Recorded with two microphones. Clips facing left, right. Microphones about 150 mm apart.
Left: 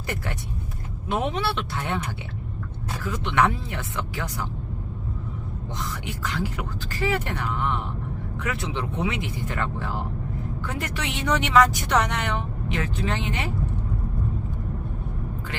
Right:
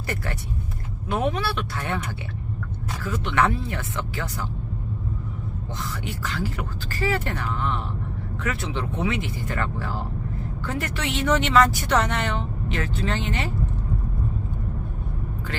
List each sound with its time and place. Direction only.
1.0 s speech: 20° left (ahead or behind)
3.0 s speech: 15° left (ahead or behind)
5.8 s speech: 20° left (ahead or behind)